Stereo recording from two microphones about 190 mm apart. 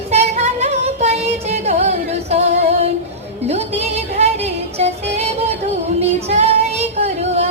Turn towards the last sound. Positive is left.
turn(degrees=-35)  # may be behind; listen again after turning